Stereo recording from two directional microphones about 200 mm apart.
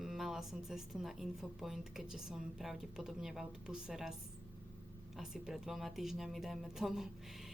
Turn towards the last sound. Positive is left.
turn(degrees=0)  # may be behind; listen again after turning